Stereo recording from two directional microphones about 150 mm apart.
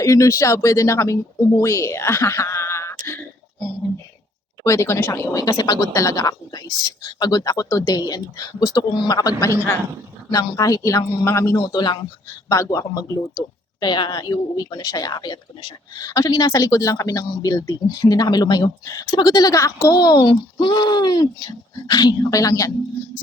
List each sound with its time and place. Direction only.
0.0 s speech: 20° left (ahead or behind)
4.6 s speech: 20° left (ahead or behind)